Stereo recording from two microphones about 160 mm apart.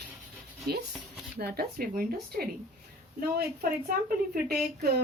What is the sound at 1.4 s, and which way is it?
Speech, 75° right (ahead or behind).